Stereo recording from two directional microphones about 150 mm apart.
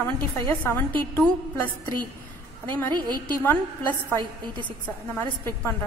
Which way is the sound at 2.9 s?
30° right (ahead or behind).